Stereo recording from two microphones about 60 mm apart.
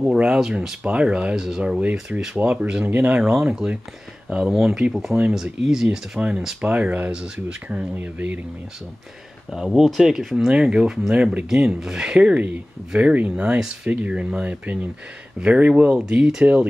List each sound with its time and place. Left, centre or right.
0.1 s speech: centre
3.3 s speech: centre
5.9 s speech: centre
9.8 s speech: centre